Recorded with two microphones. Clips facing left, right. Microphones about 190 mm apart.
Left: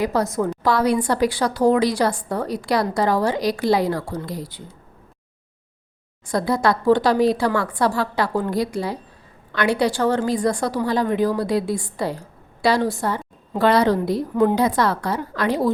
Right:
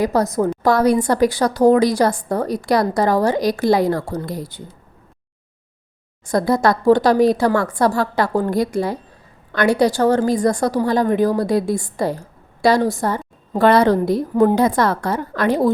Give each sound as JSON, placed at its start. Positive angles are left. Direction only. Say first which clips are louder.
{"t": 0.0, "sound": "a woman's voice", "louder": "right 3 dB", "side_deg": -40}
{"t": 6.2, "sound": "a woman's voice", "louder": "right 3 dB", "side_deg": -45}